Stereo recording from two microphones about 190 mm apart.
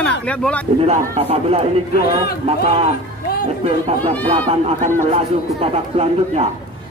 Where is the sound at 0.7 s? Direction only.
30° right (ahead or behind).